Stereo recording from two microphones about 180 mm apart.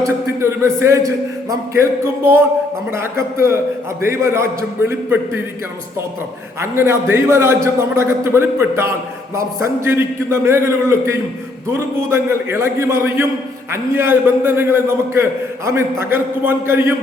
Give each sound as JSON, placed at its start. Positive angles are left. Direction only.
{"t": 0.3, "sound": "a man's voice", "side_deg": -15}
{"t": 6.6, "sound": "a man's voice", "side_deg": -15}